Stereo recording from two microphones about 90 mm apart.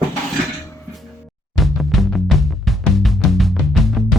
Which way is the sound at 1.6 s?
Centre (ahead or behind).